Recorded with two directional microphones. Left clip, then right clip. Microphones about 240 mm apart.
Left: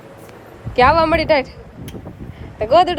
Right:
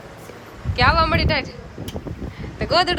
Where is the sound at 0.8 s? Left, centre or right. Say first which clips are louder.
Left 5 dB; left.